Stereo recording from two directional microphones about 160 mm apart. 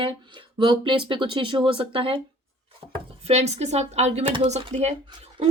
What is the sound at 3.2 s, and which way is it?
Speech, 45° right (ahead or behind).